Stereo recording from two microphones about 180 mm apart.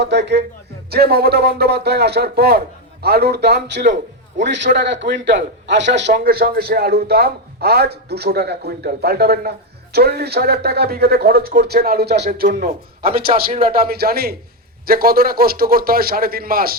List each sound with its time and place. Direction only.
0.0 s speech: 70° right (ahead or behind)
0.9 s a man's voice: 60° right (ahead or behind)
4.5 s a man's voice: 80° right
6.1 s a man's voice: 55° right (ahead or behind)
13.1 s a man's voice: 30° right (ahead or behind)
13.7 s a man's voice: 60° right (ahead or behind)